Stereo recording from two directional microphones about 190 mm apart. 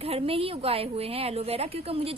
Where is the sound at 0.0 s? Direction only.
30° right (ahead or behind).